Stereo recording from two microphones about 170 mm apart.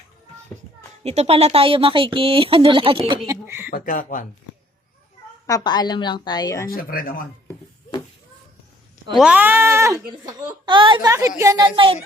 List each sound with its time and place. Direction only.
1.0 s speech: 40° right (ahead or behind)
3.2 s speech: 10° right (ahead or behind)
3.7 s speech: 55° left (ahead or behind)
5.5 s a woman's voice: 25° left (ahead or behind)
6.7 s speech: 55° left (ahead or behind)
9.1 s speech: 5° right (ahead or behind)
10.2 s speech: 25° right (ahead or behind)
11.1 s speech: 15° right (ahead or behind)